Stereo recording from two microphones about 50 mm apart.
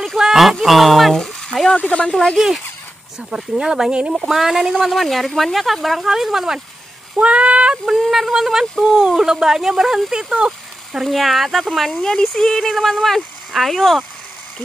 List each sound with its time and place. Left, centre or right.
0.1 s a sound: centre
1.8 s speech: left
2.3 s speech: centre
4.7 s speech: centre
7.2 s a sound: right
8.0 s speech: centre
11.9 s speech: centre